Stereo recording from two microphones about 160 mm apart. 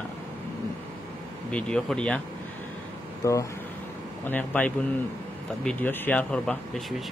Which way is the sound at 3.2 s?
20° left (ahead or behind).